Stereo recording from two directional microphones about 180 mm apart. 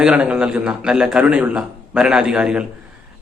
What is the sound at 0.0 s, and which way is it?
Speech, 5° right (ahead or behind).